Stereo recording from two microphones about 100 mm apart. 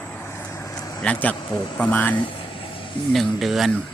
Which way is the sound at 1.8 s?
15° left (ahead or behind).